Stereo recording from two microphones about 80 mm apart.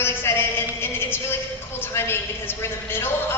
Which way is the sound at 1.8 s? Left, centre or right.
Left.